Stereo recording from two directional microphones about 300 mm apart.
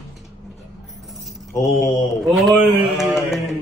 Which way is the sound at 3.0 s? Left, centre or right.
Centre.